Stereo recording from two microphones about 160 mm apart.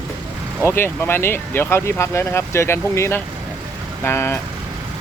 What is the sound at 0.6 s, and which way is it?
Speech, 15° left (ahead or behind).